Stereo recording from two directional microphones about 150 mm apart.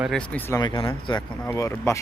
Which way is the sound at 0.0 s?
5° left (ahead or behind).